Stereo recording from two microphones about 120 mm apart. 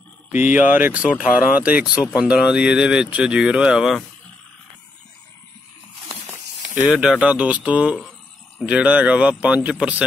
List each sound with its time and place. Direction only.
0.4 s speech: 90° left
0.7 s speech: 15° right (ahead or behind)
6.2 s a sound: 15° right (ahead or behind)
6.9 s speech: 5° right (ahead or behind)